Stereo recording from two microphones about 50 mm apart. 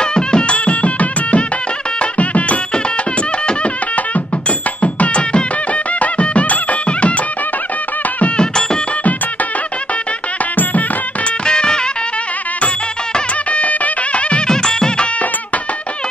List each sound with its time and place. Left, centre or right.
0.0 s music: centre
11.4 s music: centre
13.5 s music: left
14.5 s music: centre